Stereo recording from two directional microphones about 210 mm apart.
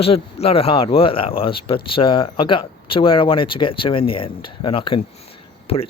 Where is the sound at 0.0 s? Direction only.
25° left (ahead or behind).